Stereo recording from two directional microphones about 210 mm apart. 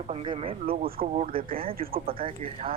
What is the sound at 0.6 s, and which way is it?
Speech, 45° right (ahead or behind).